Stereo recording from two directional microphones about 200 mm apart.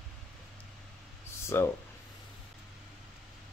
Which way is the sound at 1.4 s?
15° left (ahead or behind).